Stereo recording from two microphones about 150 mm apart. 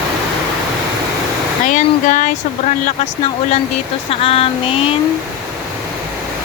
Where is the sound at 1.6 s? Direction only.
60° left (ahead or behind).